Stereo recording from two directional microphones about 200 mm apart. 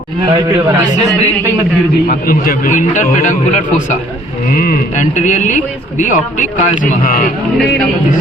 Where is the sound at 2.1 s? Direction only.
45° left (ahead or behind).